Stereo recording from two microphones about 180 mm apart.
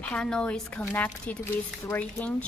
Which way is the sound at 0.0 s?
5° left (ahead or behind).